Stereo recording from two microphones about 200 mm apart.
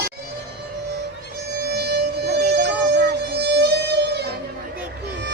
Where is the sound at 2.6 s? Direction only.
50° right (ahead or behind).